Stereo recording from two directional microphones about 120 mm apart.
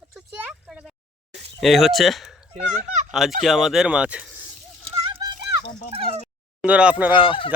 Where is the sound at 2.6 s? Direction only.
90° right.